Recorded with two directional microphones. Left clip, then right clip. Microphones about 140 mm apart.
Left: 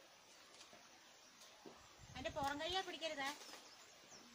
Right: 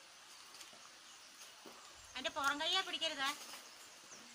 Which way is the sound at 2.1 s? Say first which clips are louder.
Right 6 dB; 30° left (ahead or behind).